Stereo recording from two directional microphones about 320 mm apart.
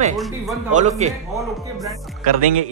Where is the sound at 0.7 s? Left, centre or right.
Right.